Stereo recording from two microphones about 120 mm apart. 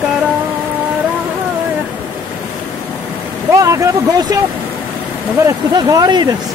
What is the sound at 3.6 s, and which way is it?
Speech, 25° right (ahead or behind).